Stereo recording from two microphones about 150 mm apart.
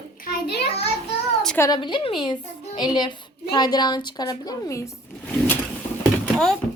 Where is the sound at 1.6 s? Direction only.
30° left (ahead or behind).